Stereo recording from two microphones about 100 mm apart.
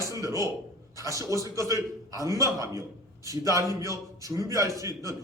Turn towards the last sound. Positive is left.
turn(degrees=-35)  # may be behind; listen again after turning